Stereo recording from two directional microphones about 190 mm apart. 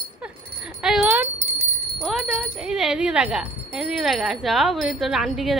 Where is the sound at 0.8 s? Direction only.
5° right (ahead or behind).